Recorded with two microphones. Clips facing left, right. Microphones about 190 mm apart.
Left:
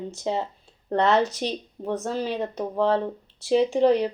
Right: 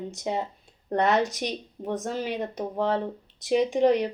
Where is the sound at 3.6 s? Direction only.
15° right (ahead or behind).